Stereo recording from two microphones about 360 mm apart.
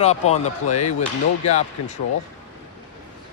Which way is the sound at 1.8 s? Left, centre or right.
Left.